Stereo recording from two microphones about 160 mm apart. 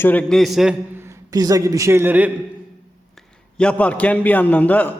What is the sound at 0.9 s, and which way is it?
A man's voice, 15° right (ahead or behind).